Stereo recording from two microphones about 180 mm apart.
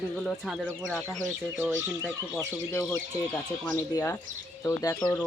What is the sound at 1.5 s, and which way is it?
Speech, 15° right (ahead or behind).